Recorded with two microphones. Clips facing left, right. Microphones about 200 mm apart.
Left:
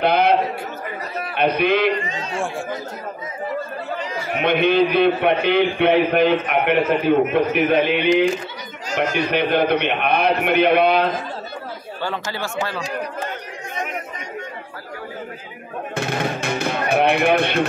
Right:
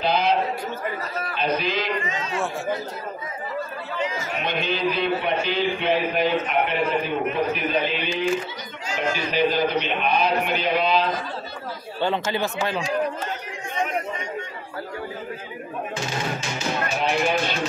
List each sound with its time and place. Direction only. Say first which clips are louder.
0.0 s a sound: left 5 dB; 60° left (ahead or behind)
1.3 s a man's voice: left 7 dB; 60° left (ahead or behind)
2.0 s a man's voice: left 1 dB; 30° left (ahead or behind)
4.3 s a man's voice: left 8 dB; 60° left (ahead or behind)
12.0 s speech: right 4 dB; 20° right (ahead or behind)
15.9 s music: left 7 dB; 60° left (ahead or behind)